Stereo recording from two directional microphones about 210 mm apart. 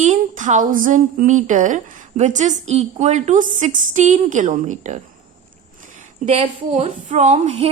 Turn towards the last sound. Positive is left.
turn(degrees=-30)  # may be behind; listen again after turning